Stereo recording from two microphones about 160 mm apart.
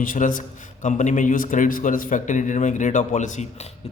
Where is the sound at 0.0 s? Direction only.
55° left (ahead or behind).